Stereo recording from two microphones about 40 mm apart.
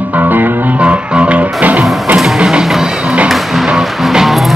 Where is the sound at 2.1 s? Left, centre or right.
Centre.